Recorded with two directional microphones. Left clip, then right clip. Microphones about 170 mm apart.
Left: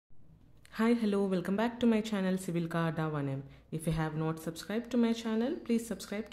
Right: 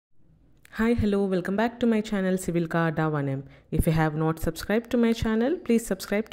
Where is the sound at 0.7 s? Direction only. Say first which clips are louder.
Right 5 dB; 20° right (ahead or behind).